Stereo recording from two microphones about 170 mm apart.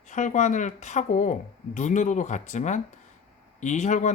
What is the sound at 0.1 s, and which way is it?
Speech, 45° left (ahead or behind).